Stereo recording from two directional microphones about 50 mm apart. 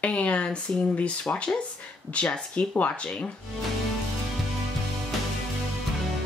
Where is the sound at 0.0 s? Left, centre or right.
Left.